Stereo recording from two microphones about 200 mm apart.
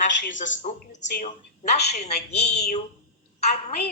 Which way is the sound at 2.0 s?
55° left (ahead or behind).